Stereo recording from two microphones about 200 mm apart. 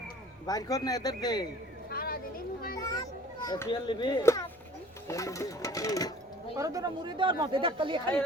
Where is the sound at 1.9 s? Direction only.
50° left (ahead or behind).